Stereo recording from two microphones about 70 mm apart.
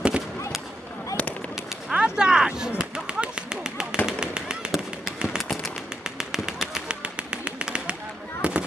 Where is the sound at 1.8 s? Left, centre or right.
Centre.